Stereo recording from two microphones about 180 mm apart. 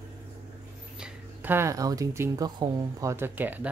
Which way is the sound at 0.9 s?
5° right (ahead or behind).